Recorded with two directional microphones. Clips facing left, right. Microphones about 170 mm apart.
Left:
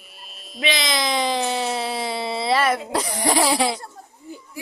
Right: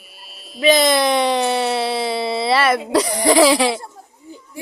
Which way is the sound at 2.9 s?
90° right.